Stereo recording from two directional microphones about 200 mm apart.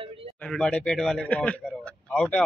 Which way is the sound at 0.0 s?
25° right (ahead or behind).